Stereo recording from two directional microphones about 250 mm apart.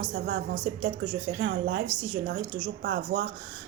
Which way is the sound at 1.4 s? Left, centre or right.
Right.